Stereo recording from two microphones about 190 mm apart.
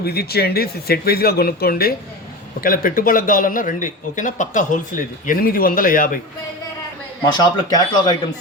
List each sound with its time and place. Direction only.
0.0 s speech: 55° left (ahead or behind)
7.3 s speech: 20° left (ahead or behind)